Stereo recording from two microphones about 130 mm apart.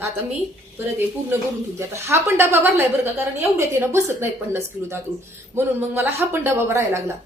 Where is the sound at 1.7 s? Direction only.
20° right (ahead or behind).